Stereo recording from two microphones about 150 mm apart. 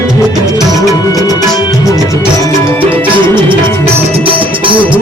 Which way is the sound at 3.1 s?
35° right (ahead or behind).